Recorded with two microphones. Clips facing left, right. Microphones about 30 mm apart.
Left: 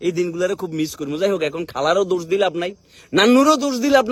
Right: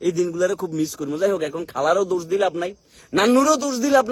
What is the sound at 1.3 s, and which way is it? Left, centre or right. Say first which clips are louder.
Speech: left 3 dB; left.